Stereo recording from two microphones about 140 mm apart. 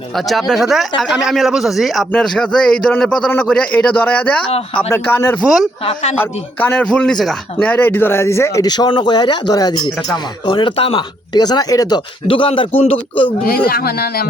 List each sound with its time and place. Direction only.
0.3 s a man's voice: centre (ahead or behind)
4.4 s speech: 40° left (ahead or behind)
4.8 s a man's voice: 15° left (ahead or behind)
5.8 s a man's voice: 50° left (ahead or behind)
6.1 s a man's voice: 15° left (ahead or behind); by 11.9 s 30° left (ahead or behind)
12.3 s a man's voice: 40° left (ahead or behind)
13.7 s a man's voice: 90° left